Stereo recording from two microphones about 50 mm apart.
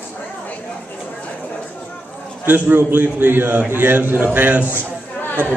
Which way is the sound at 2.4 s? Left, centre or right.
Right.